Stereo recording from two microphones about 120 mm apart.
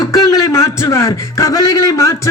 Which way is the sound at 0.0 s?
30° left (ahead or behind).